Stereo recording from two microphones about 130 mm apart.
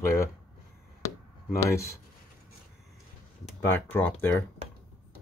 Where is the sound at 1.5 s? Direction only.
25° left (ahead or behind).